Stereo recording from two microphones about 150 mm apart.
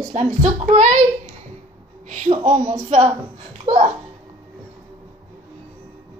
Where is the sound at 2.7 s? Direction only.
40° right (ahead or behind).